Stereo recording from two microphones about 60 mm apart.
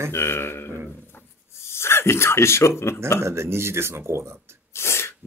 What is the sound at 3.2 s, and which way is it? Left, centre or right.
Speech, right.